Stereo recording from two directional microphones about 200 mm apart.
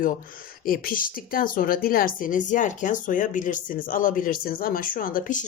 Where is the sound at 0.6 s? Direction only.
45° left (ahead or behind).